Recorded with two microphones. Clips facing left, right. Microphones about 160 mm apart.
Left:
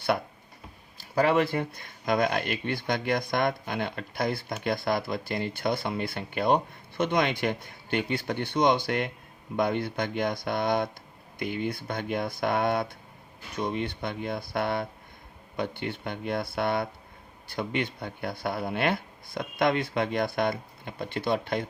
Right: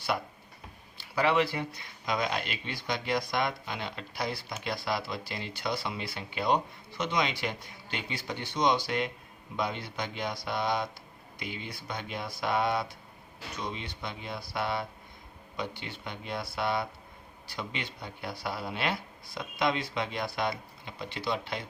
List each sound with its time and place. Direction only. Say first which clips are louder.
0.9 s speech: left 3 dB; 45° left (ahead or behind)